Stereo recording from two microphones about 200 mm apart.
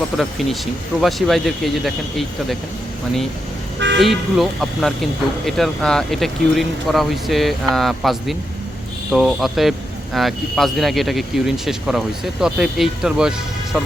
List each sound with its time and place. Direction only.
0.2 s speech: centre (ahead or behind)
3.8 s speech: 60° right (ahead or behind)
4.0 s speech: centre (ahead or behind)